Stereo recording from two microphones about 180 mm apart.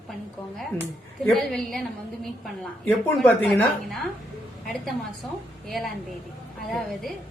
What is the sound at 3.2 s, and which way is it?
A woman's voice, 5° left (ahead or behind).